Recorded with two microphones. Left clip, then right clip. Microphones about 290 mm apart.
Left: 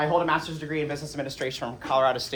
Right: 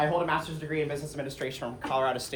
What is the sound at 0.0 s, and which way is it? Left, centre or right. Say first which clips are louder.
Speech: left 3 dB; left.